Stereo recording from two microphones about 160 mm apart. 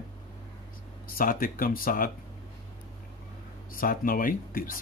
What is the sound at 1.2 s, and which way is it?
Speech, 60° left (ahead or behind).